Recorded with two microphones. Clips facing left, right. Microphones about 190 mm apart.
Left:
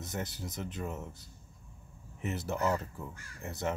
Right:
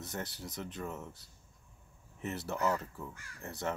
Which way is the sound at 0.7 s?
25° left (ahead or behind).